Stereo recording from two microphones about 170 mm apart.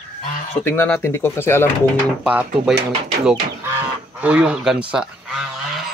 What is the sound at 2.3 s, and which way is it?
Speech, 5° right (ahead or behind).